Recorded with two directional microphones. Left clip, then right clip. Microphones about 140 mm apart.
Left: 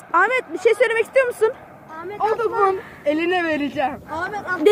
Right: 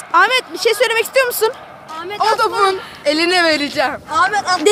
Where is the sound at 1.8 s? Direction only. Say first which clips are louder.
Right 6 dB; 5° right (ahead or behind).